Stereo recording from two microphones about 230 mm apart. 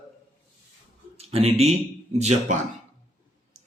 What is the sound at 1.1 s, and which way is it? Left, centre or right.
Speech, right.